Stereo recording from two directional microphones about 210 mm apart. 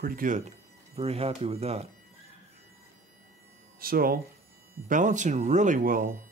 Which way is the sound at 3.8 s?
45° right (ahead or behind).